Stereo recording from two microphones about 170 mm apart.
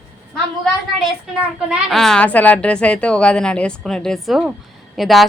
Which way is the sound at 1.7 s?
Centre (ahead or behind).